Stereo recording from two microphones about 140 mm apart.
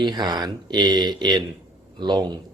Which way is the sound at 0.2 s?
30° right (ahead or behind).